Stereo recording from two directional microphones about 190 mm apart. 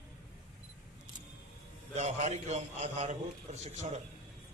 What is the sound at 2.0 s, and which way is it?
A man's voice, 35° right (ahead or behind).